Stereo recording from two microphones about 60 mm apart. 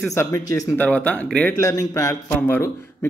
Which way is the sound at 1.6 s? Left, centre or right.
Left.